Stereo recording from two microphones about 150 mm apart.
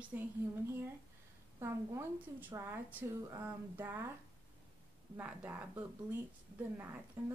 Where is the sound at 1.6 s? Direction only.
15° right (ahead or behind).